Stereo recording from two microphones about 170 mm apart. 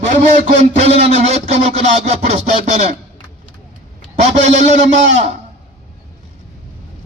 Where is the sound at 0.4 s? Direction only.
40° right (ahead or behind).